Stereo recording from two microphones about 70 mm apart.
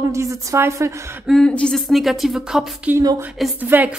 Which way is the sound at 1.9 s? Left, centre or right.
Centre.